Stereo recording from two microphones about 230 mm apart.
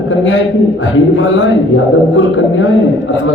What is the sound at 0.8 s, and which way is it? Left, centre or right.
A man's voice, left.